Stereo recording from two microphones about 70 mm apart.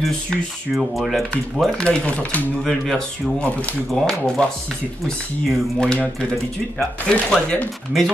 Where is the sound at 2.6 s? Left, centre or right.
Centre.